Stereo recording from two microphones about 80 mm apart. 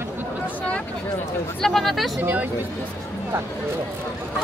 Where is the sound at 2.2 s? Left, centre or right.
Right.